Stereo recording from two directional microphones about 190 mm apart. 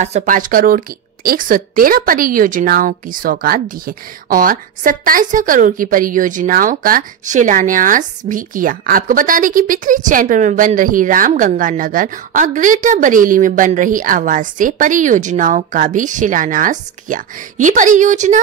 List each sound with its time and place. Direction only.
0.0 s speech: 35° right (ahead or behind)